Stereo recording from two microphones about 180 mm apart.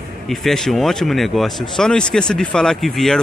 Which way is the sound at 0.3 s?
Centre (ahead or behind).